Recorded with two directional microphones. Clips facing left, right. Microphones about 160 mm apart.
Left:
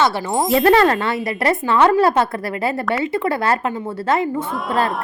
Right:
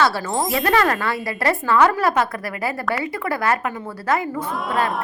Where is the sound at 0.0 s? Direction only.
20° left (ahead or behind).